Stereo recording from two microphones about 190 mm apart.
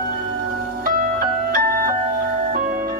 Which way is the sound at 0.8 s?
50° right (ahead or behind).